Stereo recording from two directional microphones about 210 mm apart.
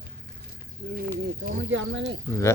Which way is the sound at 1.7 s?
60° right (ahead or behind).